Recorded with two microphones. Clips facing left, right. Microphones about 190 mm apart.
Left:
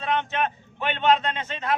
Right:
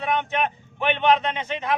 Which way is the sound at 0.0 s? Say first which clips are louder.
Right 1 dB; 15° right (ahead or behind).